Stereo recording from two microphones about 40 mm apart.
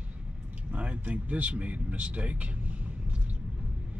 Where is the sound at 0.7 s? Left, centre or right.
Right.